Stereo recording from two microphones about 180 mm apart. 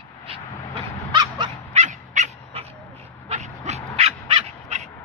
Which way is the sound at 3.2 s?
40° right (ahead or behind).